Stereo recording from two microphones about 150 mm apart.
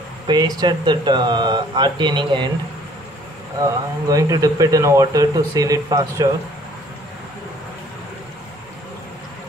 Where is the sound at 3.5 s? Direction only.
20° right (ahead or behind).